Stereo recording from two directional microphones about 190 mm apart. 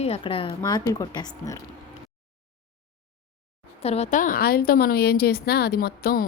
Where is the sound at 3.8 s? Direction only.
35° left (ahead or behind).